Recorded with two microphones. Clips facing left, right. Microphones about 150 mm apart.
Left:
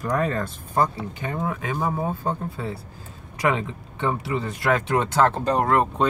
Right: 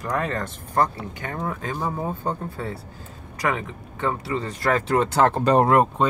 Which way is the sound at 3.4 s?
20° left (ahead or behind).